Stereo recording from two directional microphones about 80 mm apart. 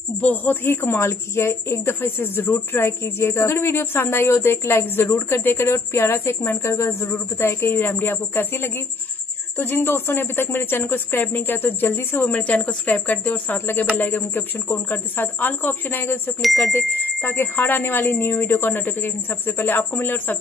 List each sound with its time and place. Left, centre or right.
0.2 s a woman's voice: left
16.3 s speech: centre
16.7 s a woman's voice: left